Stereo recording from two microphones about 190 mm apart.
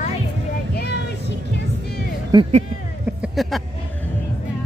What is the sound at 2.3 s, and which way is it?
Speech, 20° right (ahead or behind).